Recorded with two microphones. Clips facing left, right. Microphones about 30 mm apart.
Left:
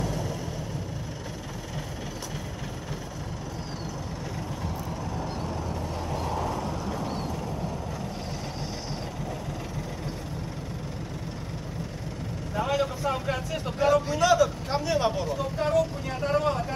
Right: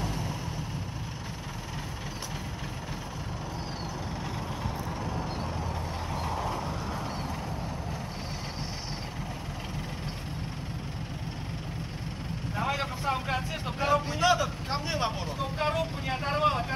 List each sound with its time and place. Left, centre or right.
0.0 s vehicle: right
12.5 s a man's voice: right